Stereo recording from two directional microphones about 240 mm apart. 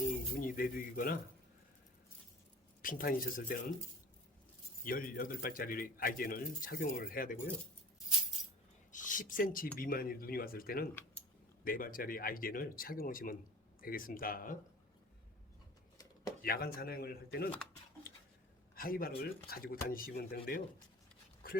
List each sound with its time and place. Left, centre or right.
0.0 s music: left
2.8 s speech: left
4.8 s speech: left
8.9 s a sound: left
9.7 s speech: left
16.4 s speech: left
18.7 s speech: left